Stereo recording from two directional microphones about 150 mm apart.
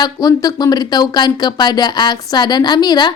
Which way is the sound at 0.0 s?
25° left (ahead or behind).